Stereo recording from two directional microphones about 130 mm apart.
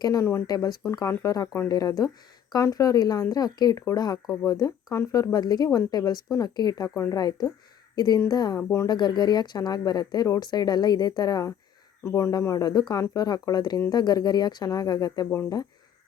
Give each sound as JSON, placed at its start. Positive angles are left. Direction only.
{"t": 0.0, "sound": "speech", "side_deg": 25}
{"t": 8.9, "sound": "speech", "side_deg": 35}